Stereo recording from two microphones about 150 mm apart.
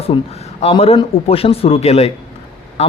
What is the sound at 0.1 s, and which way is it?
A man's voice, 35° left (ahead or behind).